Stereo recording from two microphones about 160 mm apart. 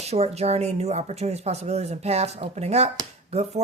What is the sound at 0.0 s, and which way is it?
Speech, 40° right (ahead or behind).